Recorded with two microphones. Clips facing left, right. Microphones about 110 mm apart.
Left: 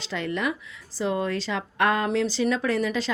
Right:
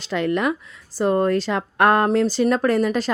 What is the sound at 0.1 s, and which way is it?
Speech, 60° right (ahead or behind).